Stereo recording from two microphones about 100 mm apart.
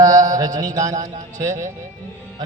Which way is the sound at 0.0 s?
35° right (ahead or behind).